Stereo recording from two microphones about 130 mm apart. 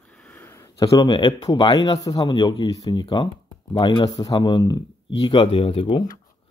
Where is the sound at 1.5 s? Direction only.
35° left (ahead or behind).